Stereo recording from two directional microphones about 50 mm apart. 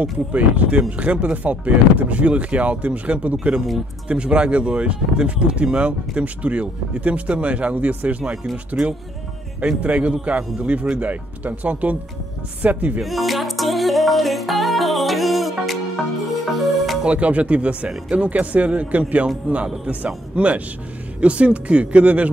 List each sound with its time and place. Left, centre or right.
0.0 s speech: right
9.6 s speech: right
13.0 s music: centre
17.0 s speech: right